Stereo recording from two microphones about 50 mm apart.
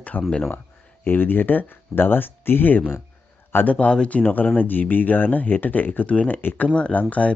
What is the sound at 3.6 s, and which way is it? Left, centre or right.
Speech, left.